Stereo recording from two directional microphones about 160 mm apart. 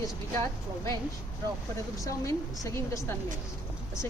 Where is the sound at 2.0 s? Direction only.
20° left (ahead or behind).